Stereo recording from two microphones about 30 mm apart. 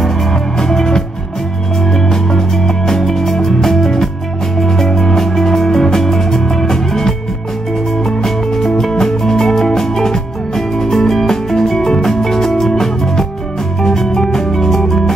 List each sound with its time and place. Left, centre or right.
0.6 s music: centre